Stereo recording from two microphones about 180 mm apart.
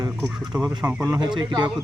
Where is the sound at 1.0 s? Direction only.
20° right (ahead or behind).